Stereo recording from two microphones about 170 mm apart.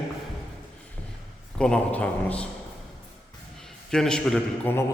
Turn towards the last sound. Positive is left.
turn(degrees=10)  # may be behind; listen again after turning